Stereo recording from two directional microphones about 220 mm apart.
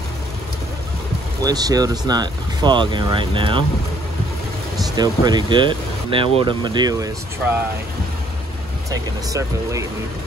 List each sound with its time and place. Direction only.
1.4 s speech: 15° right (ahead or behind)
4.9 s speech: 20° right (ahead or behind)
8.9 s speech: 15° right (ahead or behind)